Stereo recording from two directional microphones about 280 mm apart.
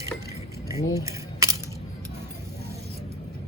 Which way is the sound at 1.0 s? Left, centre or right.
Centre.